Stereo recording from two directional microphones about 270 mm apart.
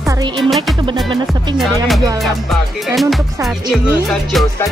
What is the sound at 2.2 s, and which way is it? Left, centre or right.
Speech, centre.